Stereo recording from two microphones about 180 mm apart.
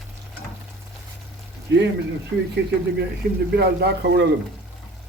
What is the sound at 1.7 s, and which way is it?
Speech, 75° right (ahead or behind).